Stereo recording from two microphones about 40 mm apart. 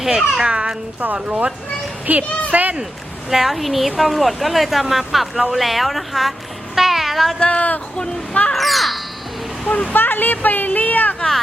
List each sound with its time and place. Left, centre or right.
0.0 s a child's voice: centre
0.4 s a child's voice: right
1.0 s speech: right
3.2 s speech: centre
6.7 s a sound: centre
7.3 s speech: left
8.5 s speech: centre
9.9 s speech: left
10.7 s a sound: left